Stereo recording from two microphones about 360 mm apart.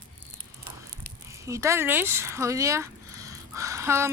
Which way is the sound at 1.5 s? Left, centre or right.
Centre.